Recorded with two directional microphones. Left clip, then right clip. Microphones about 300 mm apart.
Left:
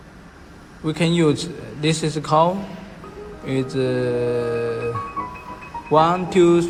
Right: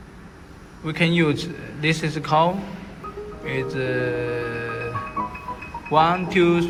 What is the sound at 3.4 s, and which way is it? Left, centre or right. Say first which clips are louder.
Music: left 3 dB; centre.